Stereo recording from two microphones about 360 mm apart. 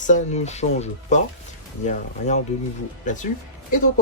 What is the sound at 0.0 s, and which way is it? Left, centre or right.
Speech, left.